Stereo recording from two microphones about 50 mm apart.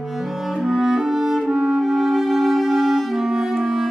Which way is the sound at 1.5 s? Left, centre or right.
Centre.